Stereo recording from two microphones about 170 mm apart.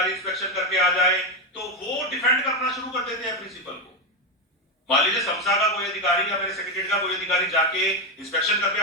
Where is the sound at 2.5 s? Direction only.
Centre (ahead or behind).